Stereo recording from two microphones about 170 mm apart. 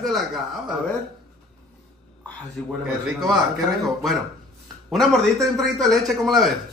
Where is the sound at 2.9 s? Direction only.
Centre (ahead or behind).